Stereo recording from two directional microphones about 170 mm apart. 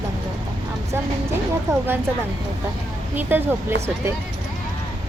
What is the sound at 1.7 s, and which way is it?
Speech, 15° right (ahead or behind).